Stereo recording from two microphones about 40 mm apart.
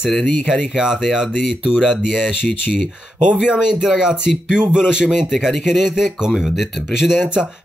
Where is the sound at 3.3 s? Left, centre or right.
Right.